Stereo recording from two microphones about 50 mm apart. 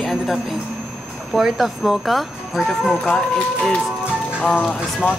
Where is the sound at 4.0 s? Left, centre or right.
Centre.